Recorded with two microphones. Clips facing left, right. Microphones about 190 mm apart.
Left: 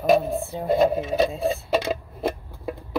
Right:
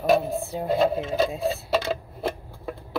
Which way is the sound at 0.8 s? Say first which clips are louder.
Left 2 dB; 15° left (ahead or behind).